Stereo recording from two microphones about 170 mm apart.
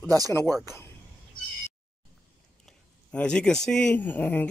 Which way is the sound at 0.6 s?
15° left (ahead or behind).